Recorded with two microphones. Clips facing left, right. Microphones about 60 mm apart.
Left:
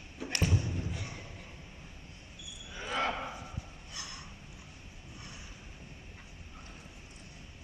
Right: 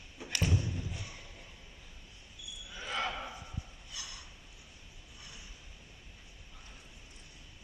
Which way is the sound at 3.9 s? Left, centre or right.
Left.